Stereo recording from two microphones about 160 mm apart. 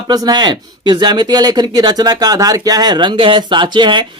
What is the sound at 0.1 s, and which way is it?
Speech, 25° right (ahead or behind).